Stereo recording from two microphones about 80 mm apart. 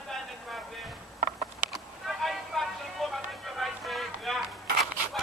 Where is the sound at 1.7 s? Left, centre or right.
Centre.